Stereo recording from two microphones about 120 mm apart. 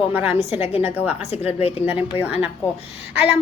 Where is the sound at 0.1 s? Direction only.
15° right (ahead or behind).